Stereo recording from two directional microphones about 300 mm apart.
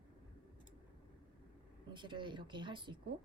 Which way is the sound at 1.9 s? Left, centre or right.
Centre.